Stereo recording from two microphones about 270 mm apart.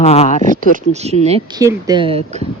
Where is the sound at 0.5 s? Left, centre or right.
Right.